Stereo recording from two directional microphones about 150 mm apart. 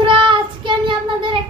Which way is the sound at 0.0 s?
35° right (ahead or behind).